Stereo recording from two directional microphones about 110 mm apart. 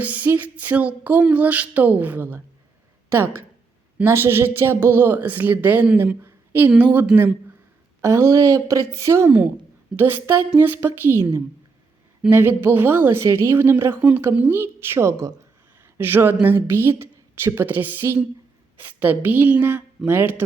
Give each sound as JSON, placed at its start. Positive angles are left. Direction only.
{"t": 0.0, "sound": "a sound", "side_deg": -15}
{"t": 3.9, "sound": "a woman's voice", "side_deg": -20}
{"t": 8.0, "sound": "speech", "side_deg": -25}
{"t": 12.3, "sound": "a woman's voice", "side_deg": -20}
{"t": 18.8, "sound": "a sound", "side_deg": -15}
{"t": 20.1, "sound": "speech", "side_deg": -20}